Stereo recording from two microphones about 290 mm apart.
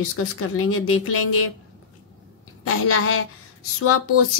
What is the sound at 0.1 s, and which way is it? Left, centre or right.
A woman's voice, left.